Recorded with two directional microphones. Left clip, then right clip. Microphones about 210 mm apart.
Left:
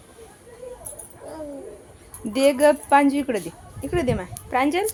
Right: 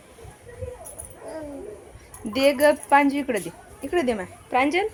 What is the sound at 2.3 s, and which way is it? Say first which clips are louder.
A child's voice: left 1 dB; 5° left (ahead or behind).